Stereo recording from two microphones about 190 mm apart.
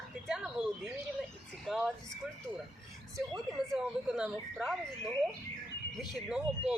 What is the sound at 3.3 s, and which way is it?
Speech, 5° right (ahead or behind).